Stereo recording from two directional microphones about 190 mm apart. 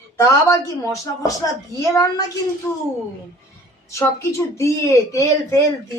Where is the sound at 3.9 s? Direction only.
15° left (ahead or behind).